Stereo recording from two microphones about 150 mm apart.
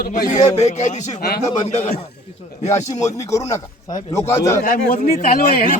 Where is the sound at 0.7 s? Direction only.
50° left (ahead or behind).